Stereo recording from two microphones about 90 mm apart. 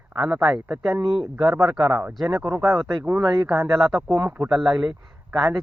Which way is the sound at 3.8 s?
Centre (ahead or behind).